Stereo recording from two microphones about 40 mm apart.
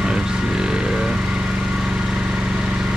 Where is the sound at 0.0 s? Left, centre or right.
Centre.